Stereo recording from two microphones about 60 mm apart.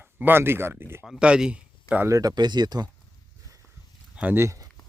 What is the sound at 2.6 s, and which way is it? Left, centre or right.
Speech, right.